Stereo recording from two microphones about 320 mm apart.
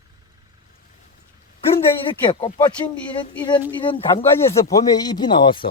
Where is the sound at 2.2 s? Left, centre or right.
Centre.